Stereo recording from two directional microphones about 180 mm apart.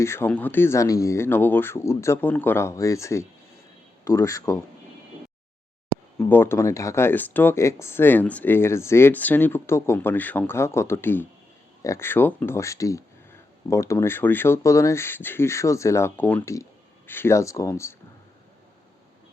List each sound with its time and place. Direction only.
0.0 s speech: 15° left (ahead or behind)
6.1 s speech: 10° left (ahead or behind)